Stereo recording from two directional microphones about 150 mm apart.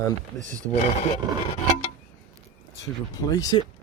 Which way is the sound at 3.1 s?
25° left (ahead or behind).